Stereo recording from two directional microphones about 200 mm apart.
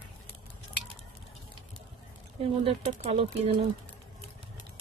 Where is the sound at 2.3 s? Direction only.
30° right (ahead or behind).